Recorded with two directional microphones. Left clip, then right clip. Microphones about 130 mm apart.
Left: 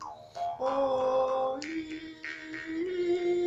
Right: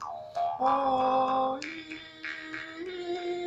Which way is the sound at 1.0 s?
15° left (ahead or behind).